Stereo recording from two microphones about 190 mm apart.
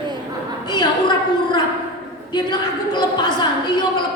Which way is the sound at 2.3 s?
20° left (ahead or behind).